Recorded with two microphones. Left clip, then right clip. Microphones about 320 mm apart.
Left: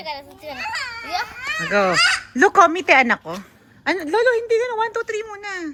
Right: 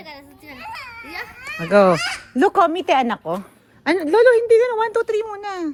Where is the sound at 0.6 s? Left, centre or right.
Left.